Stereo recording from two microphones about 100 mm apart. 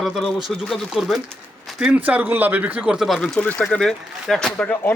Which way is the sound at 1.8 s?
15° right (ahead or behind).